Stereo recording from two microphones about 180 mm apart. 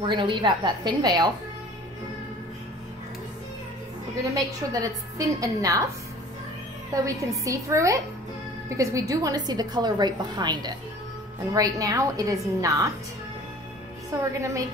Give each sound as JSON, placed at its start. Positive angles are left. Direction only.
{"t": 0.0, "sound": "a woman's voice", "side_deg": -25}
{"t": 4.2, "sound": "a woman's voice", "side_deg": -20}
{"t": 6.9, "sound": "a woman's voice", "side_deg": -20}
{"t": 14.1, "sound": "a woman's voice", "side_deg": -20}